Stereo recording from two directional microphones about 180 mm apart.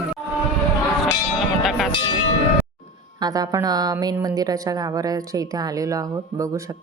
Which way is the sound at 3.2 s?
20° right (ahead or behind).